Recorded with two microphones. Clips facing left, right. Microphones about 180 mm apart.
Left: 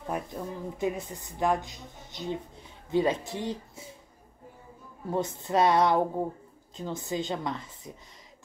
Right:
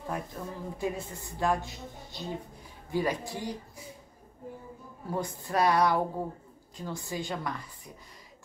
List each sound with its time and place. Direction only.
0.0 s a woman's voice: 20° left (ahead or behind)
5.1 s a woman's voice: 25° left (ahead or behind)